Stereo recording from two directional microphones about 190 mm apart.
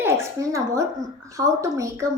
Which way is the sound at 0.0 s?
15° right (ahead or behind).